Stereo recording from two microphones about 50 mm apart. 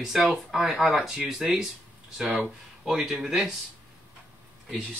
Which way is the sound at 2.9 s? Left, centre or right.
Centre.